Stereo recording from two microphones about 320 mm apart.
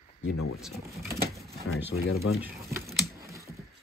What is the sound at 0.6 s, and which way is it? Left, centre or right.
Speech, centre.